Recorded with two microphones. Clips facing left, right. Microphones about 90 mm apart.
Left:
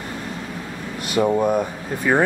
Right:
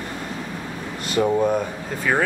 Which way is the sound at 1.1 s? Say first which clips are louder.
Left 1 dB; 10° left (ahead or behind).